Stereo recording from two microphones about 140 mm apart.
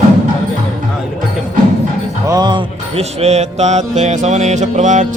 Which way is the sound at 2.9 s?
50° right (ahead or behind).